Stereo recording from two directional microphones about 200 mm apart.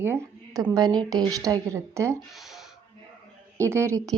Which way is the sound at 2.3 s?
Centre (ahead or behind).